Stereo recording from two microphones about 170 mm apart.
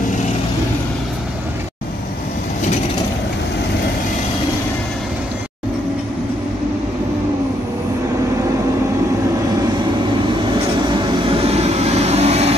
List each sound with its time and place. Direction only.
10.8 s vehicle: 25° right (ahead or behind)